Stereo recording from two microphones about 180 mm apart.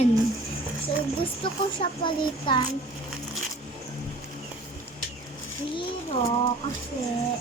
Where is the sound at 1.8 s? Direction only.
25° left (ahead or behind).